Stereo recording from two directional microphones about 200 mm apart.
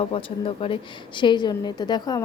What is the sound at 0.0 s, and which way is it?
A woman's voice, 30° left (ahead or behind).